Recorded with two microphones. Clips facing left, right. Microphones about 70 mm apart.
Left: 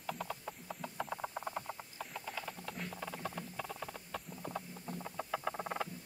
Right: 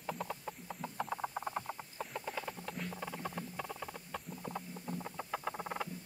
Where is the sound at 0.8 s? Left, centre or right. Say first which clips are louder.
Right 2 dB; centre.